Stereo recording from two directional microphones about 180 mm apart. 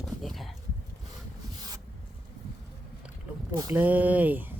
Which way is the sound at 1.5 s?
20° right (ahead or behind).